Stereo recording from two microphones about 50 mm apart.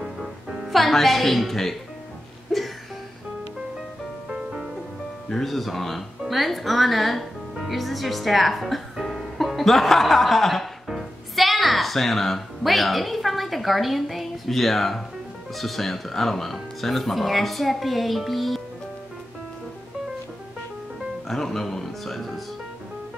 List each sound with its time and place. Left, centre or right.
0.0 s music: centre
0.7 s speech: centre
2.5 s music: centre
4.3 s music: centre
5.3 s speech: centre
21.3 s music: centre